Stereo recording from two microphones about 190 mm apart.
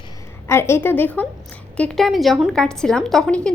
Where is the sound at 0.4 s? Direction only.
15° left (ahead or behind).